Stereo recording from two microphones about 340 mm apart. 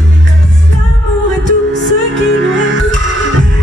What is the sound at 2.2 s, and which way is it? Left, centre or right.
Music, right.